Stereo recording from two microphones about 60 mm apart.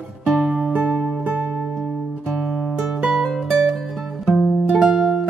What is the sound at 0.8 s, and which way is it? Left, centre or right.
Music, right.